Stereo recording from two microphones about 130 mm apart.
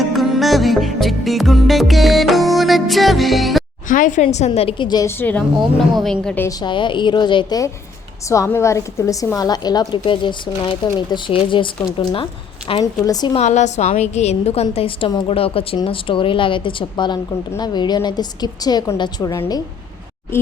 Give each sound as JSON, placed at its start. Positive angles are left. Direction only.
{"t": 0.0, "sound": "music", "side_deg": 0}
{"t": 3.8, "sound": "a woman's voice", "side_deg": 90}
{"t": 5.0, "sound": "a woman's voice", "side_deg": 15}
{"t": 6.0, "sound": "a woman's voice", "side_deg": 5}
{"t": 6.5, "sound": "a woman's voice", "side_deg": 35}
{"t": 8.3, "sound": "a woman's voice", "side_deg": 25}
{"t": 12.8, "sound": "a woman's voice", "side_deg": 25}
{"t": 13.3, "sound": "a woman's voice", "side_deg": 60}